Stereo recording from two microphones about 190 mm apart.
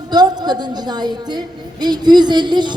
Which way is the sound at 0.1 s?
20° right (ahead or behind).